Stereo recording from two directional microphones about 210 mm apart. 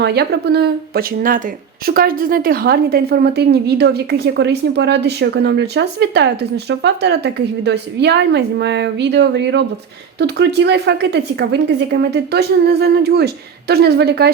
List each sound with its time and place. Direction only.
0.0 s speech: 50° right (ahead or behind)